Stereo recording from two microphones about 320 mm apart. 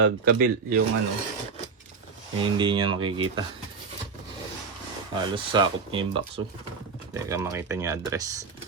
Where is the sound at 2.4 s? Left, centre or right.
Centre.